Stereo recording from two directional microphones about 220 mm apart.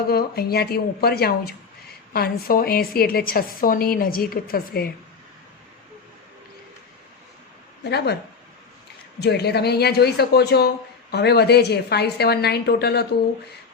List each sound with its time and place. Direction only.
0.1 s a woman's voice: 45° left (ahead or behind)
7.9 s a woman's voice: 50° left (ahead or behind)
9.2 s a woman's voice: 50° left (ahead or behind)